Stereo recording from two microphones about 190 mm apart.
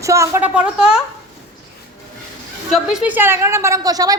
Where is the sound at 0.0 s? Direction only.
15° right (ahead or behind).